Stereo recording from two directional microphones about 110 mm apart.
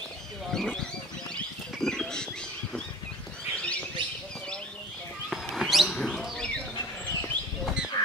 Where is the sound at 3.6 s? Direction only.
10° left (ahead or behind).